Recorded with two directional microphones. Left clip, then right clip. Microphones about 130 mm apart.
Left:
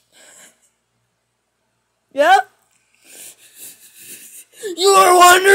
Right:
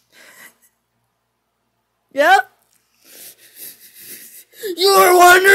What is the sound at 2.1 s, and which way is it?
Speech, 20° right (ahead or behind).